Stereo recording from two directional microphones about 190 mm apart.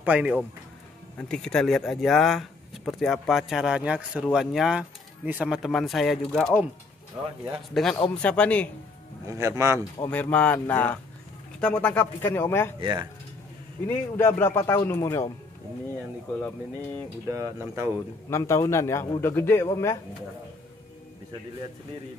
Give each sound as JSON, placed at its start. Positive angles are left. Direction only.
{"t": 0.0, "sound": "speech", "side_deg": -5}
{"t": 7.7, "sound": "speech", "side_deg": 0}
{"t": 9.3, "sound": "speech", "side_deg": -15}
{"t": 10.1, "sound": "a man's voice", "side_deg": 5}
{"t": 12.8, "sound": "speech", "side_deg": -25}
{"t": 13.8, "sound": "a man's voice", "side_deg": 10}
{"t": 16.3, "sound": "a man's voice", "side_deg": 5}
{"t": 17.3, "sound": "speech", "side_deg": -15}
{"t": 18.3, "sound": "a man's voice", "side_deg": 15}